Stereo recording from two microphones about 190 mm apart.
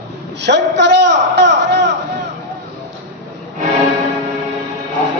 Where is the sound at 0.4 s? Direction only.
65° right (ahead or behind).